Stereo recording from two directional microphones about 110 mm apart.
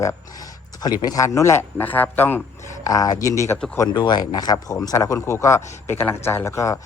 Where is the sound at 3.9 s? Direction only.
40° left (ahead or behind).